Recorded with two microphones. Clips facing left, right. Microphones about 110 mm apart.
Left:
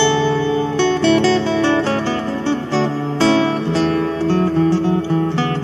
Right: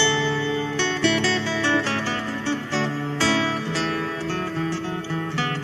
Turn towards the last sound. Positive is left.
turn(degrees=45)  # may be behind; listen again after turning